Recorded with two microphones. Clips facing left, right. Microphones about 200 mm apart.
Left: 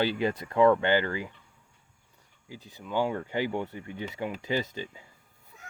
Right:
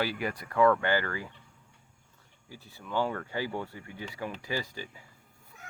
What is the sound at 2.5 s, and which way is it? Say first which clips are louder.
Speech: left 2 dB; 15° left (ahead or behind).